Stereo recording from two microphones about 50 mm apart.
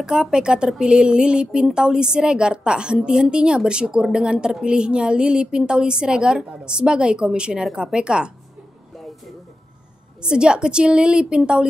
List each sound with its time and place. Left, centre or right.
0.0 s speech: centre
10.2 s speech: centre